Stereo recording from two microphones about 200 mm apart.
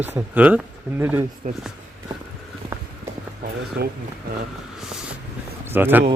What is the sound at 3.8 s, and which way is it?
Speech, 50° right (ahead or behind).